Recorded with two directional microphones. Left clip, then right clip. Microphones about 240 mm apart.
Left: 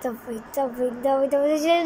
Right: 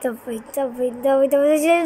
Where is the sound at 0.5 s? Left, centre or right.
Centre.